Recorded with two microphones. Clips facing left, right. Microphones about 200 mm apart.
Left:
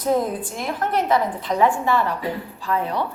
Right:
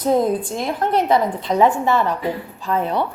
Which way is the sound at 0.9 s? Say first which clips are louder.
Right 3 dB; 25° right (ahead or behind).